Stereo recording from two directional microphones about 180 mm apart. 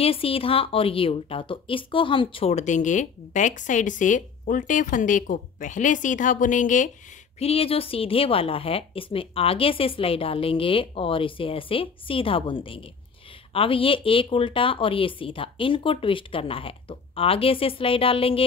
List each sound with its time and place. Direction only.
0.0 s a woman's voice: 30° left (ahead or behind)
7.3 s a woman's voice: 35° left (ahead or behind)